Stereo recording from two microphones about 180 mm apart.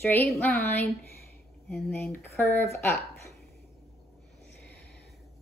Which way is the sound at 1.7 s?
5° left (ahead or behind).